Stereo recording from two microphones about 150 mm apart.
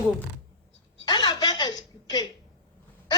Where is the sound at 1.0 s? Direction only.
30° left (ahead or behind).